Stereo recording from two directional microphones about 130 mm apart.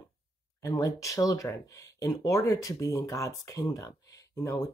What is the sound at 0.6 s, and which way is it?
Speech, 25° left (ahead or behind).